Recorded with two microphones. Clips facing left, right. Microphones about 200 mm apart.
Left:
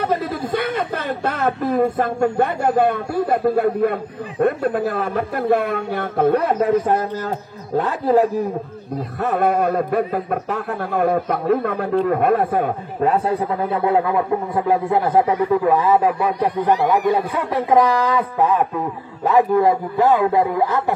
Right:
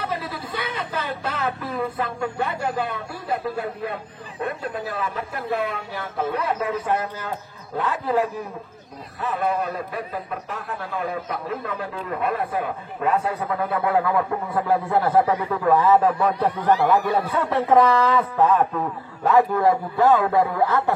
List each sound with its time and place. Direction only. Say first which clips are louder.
0.0 s speech: left 8 dB; 50° left (ahead or behind)
9.2 s a man's voice: left 6 dB; 55° left (ahead or behind)
12.5 s a man's voice: left 6 dB; 40° left (ahead or behind); by 20.9 s 15° left (ahead or behind)